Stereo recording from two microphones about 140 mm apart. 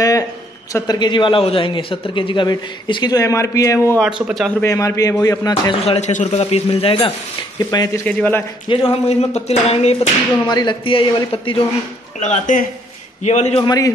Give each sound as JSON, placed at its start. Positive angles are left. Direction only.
{"t": 0.7, "sound": "a man's voice", "side_deg": 30}
{"t": 4.0, "sound": "a man's voice", "side_deg": 0}
{"t": 4.6, "sound": "speech", "side_deg": 20}
{"t": 5.9, "sound": "speech", "side_deg": 55}
{"t": 7.5, "sound": "speech", "side_deg": 25}
{"t": 8.0, "sound": "a man's voice", "side_deg": 10}
{"t": 8.6, "sound": "speech", "side_deg": 45}
{"t": 10.5, "sound": "a man's voice", "side_deg": 30}
{"t": 12.2, "sound": "a man's voice", "side_deg": 60}
{"t": 13.7, "sound": "speech", "side_deg": 25}